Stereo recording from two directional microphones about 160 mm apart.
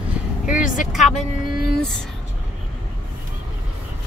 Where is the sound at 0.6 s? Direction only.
55° left (ahead or behind).